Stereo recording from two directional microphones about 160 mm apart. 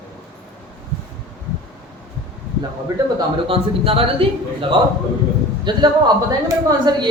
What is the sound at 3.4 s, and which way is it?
Speech, 35° right (ahead or behind).